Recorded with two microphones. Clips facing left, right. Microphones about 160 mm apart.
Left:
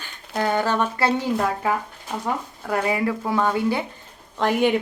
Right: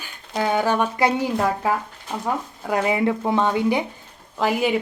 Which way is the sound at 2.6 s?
20° right (ahead or behind).